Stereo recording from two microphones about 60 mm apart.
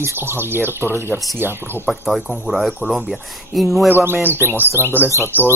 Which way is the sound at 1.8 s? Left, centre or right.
Centre.